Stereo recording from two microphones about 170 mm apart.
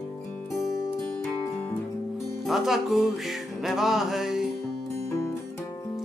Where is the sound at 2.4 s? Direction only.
Centre (ahead or behind).